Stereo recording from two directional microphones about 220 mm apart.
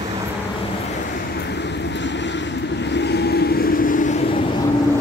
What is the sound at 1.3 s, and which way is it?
Vehicle, 50° left (ahead or behind).